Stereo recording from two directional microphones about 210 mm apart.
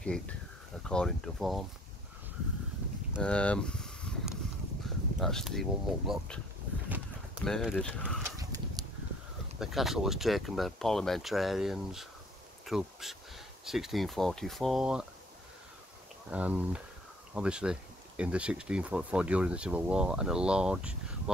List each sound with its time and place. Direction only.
0.0 s speech: 5° left (ahead or behind)
3.1 s a sound: 5° left (ahead or behind)
4.8 s speech: centre (ahead or behind)
7.4 s speech: centre (ahead or behind)
8.2 s horse: 15° right (ahead or behind)
9.6 s speech: centre (ahead or behind)
16.3 s speech: 5° right (ahead or behind)